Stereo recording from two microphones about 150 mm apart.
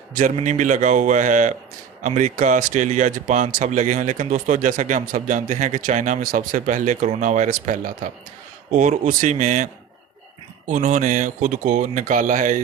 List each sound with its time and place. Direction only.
0.2 s speech: 55° right (ahead or behind)
10.7 s speech: 55° right (ahead or behind)